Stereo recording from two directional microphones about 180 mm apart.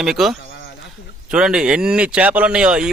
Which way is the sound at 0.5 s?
70° left (ahead or behind).